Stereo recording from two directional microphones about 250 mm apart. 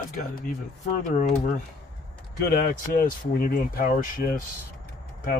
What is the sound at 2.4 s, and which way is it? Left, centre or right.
Speech, left.